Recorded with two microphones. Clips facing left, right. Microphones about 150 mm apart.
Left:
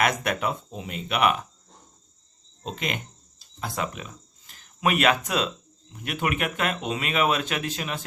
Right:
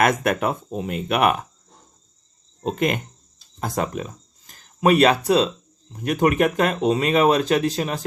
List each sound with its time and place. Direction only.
0.0 s speech: 50° right (ahead or behind)
2.6 s speech: 45° right (ahead or behind)